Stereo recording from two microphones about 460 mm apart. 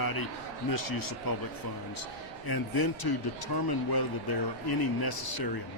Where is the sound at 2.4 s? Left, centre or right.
Left.